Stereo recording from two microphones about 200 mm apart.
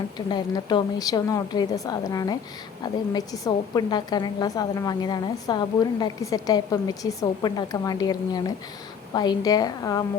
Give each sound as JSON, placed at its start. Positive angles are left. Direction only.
{"t": 0.3, "sound": "a woman's voice", "side_deg": 20}